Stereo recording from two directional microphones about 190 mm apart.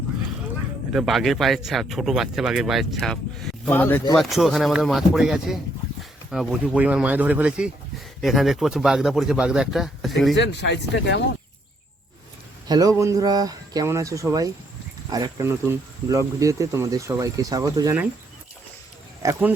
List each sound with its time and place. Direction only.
0.9 s speech: centre (ahead or behind)
10.3 s speech: 65° left (ahead or behind)
12.6 s speech: 20° right (ahead or behind)
19.2 s speech: 15° right (ahead or behind)